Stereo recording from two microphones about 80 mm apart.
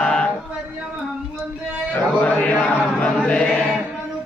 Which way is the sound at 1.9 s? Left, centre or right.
Centre.